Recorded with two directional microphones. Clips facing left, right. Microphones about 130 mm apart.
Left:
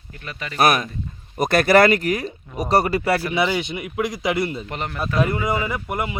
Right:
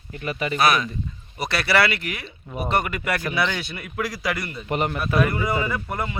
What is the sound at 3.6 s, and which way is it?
Speech, 15° left (ahead or behind).